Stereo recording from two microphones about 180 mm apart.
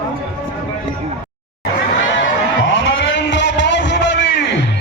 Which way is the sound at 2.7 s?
90° left.